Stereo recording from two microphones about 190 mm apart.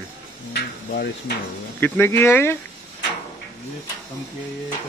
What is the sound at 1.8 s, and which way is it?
Speech, 10° left (ahead or behind).